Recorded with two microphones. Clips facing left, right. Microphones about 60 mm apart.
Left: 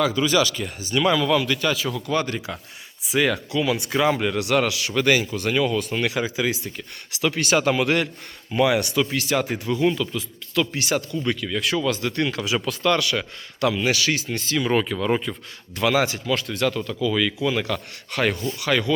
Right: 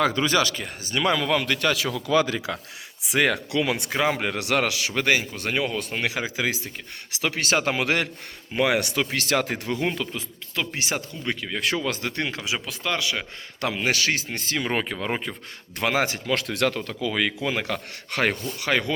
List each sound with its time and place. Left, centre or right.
0.2 s speech: right
1.7 s speech: right
3.1 s speech: right
3.8 s speech: right
5.0 s speech: right
9.1 s speech: right
12.4 s speech: centre
13.6 s speech: right
16.3 s speech: right